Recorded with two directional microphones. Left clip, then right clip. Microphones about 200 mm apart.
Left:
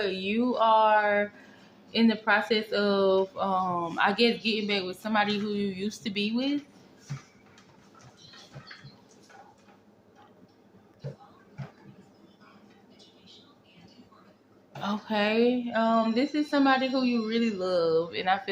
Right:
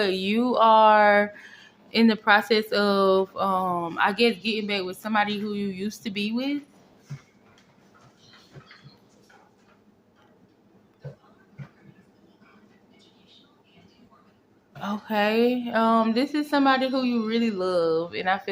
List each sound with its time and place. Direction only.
0.0 s speech: 35° right (ahead or behind)
14.8 s speech: 15° right (ahead or behind)